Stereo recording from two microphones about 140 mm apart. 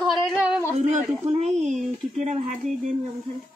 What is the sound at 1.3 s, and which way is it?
Speech, 55° right (ahead or behind).